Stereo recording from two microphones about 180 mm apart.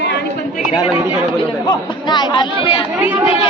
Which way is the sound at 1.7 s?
25° left (ahead or behind).